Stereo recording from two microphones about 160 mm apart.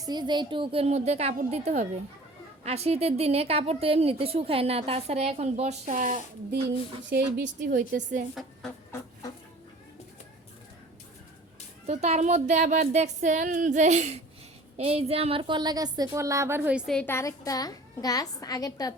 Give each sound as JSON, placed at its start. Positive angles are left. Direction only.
{"t": 0.0, "sound": "a woman's voice", "side_deg": -25}
{"t": 7.3, "sound": "a woman's voice", "side_deg": -65}
{"t": 8.9, "sound": "a sound", "side_deg": 20}
{"t": 11.9, "sound": "speech", "side_deg": -45}
{"t": 16.9, "sound": "a woman's voice", "side_deg": 10}